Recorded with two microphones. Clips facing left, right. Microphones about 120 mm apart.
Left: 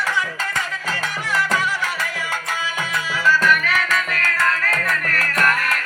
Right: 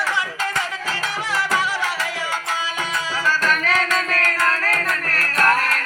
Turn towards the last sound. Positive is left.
turn(degrees=-35)  # may be behind; listen again after turning